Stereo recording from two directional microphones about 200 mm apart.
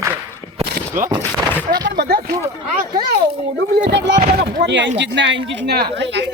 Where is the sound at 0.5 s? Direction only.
40° right (ahead or behind).